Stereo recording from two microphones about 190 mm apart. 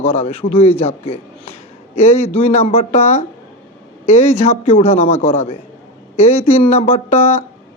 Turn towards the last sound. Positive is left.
turn(degrees=35)  # may be behind; listen again after turning